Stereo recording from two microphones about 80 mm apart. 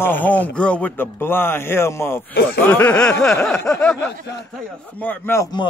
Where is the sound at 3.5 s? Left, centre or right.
Left.